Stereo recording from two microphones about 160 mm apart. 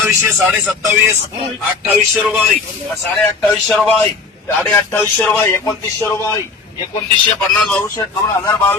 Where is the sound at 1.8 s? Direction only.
10° right (ahead or behind).